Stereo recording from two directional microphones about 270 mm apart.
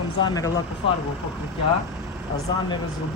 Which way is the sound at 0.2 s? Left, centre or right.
Centre.